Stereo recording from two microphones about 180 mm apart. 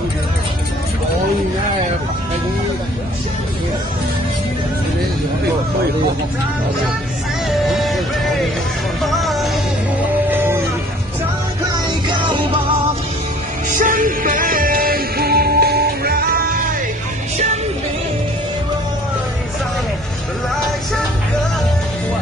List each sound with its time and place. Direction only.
7.5 s music: centre (ahead or behind)
9.0 s music: centre (ahead or behind)
10.3 s a sound: 10° right (ahead or behind)
12.1 s music: 25° right (ahead or behind)
13.7 s music: 45° right (ahead or behind)